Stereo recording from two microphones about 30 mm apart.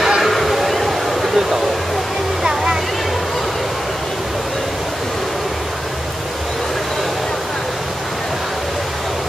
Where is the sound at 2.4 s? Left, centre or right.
Right.